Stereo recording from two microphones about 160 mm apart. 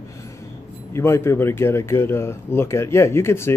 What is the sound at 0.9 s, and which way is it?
Speech, 15° left (ahead or behind).